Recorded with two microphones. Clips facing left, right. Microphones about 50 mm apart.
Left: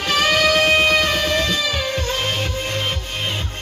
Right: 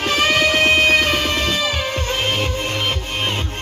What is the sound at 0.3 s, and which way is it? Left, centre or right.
Music, right.